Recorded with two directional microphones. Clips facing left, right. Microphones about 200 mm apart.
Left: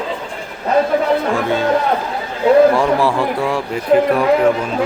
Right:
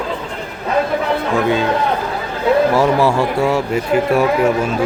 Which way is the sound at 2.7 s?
5° right (ahead or behind).